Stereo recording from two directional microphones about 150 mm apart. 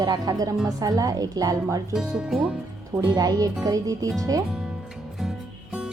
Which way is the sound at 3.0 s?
25° right (ahead or behind).